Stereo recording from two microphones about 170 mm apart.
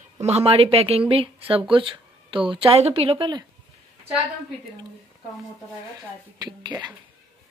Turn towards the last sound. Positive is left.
turn(degrees=-25)  # may be behind; listen again after turning